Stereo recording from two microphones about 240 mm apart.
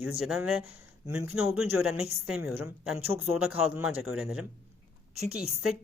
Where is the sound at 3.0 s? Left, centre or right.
Right.